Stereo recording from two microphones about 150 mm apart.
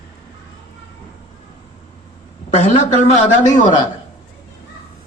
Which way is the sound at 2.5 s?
50° left (ahead or behind).